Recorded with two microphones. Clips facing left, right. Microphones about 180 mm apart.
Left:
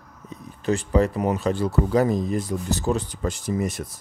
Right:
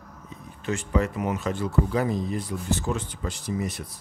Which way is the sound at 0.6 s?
35° left (ahead or behind).